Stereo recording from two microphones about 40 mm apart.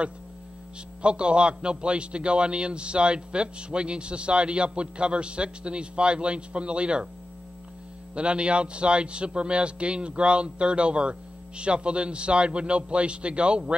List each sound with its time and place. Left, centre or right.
1.0 s a man's voice: right
8.1 s a man's voice: right